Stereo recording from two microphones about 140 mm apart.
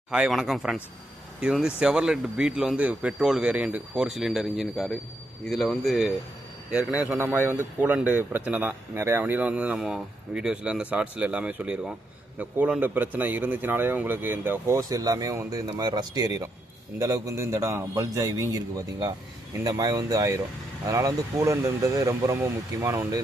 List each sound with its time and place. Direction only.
0.1 s speech: 5° right (ahead or behind); by 18.6 s 25° right (ahead or behind)
19.6 s speech: 25° right (ahead or behind)